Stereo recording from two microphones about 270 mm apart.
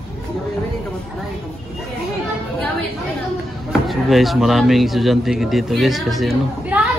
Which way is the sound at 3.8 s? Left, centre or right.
Centre.